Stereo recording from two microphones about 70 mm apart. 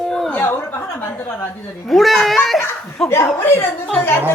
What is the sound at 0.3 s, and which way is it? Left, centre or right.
Chuckle, left.